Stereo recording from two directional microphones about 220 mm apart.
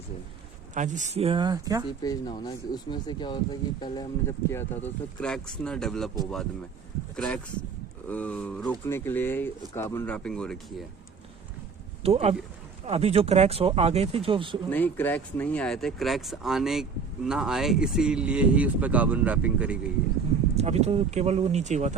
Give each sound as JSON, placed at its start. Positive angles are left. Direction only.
{"t": 0.7, "sound": "speech", "side_deg": -35}
{"t": 1.9, "sound": "speech", "side_deg": 20}
{"t": 8.0, "sound": "speech", "side_deg": 5}
{"t": 12.0, "sound": "speech", "side_deg": -30}
{"t": 14.7, "sound": "speech", "side_deg": 10}
{"t": 20.6, "sound": "speech", "side_deg": -30}